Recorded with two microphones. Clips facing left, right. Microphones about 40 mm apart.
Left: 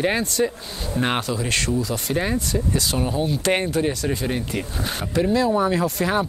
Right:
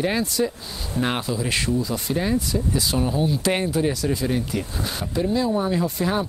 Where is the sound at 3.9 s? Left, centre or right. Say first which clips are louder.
Right 1 dB; left.